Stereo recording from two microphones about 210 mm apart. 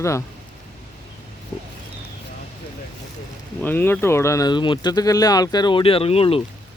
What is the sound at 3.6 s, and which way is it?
Speech, 10° left (ahead or behind).